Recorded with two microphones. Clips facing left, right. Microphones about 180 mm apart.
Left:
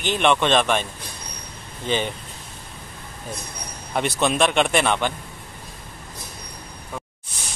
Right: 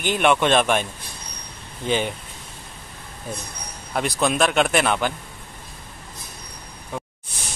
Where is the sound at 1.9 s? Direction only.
10° right (ahead or behind).